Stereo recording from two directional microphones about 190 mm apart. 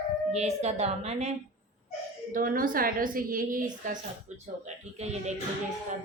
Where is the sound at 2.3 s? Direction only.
45° right (ahead or behind).